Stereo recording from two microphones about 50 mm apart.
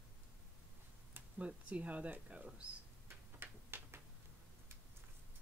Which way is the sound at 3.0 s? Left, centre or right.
Right.